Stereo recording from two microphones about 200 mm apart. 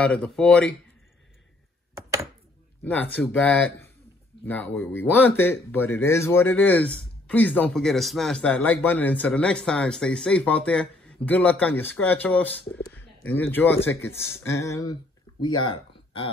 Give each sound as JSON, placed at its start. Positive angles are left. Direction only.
{"t": 0.0, "sound": "speech", "side_deg": 5}
{"t": 2.8, "sound": "speech", "side_deg": 10}